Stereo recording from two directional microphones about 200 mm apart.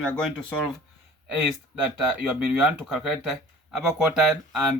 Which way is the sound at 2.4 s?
5° right (ahead or behind).